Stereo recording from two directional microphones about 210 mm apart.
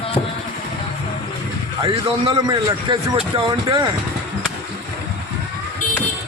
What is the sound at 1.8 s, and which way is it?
A man's voice, 25° right (ahead or behind).